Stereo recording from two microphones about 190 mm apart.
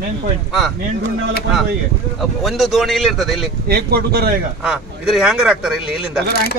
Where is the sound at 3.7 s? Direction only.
55° right (ahead or behind).